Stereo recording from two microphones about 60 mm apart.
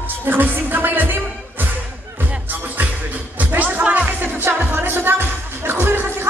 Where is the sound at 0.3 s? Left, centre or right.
Right.